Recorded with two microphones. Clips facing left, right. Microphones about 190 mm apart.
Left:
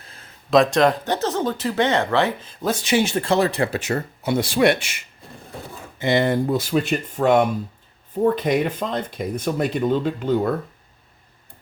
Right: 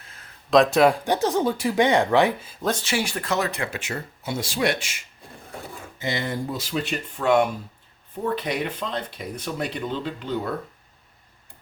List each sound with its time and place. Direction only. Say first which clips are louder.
0.0 s a sound: left 3 dB; 30° left (ahead or behind)
0.5 s speech: left 1 dB; 5° right (ahead or behind)
2.8 s speech: left 7 dB; 20° left (ahead or behind); by 3.9 s 40° left (ahead or behind)
3.9 s speech: left 8 dB; 60° left (ahead or behind)